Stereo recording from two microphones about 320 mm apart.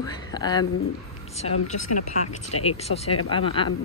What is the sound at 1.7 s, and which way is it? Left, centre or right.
Speech, left.